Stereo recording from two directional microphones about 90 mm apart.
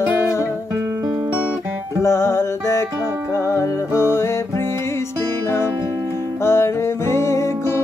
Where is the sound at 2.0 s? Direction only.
35° left (ahead or behind).